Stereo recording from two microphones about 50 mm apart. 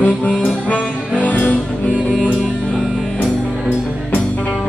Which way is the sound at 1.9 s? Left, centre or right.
Centre.